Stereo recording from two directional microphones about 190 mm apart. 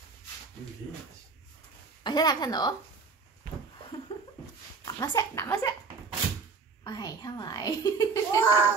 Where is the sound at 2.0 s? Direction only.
20° left (ahead or behind).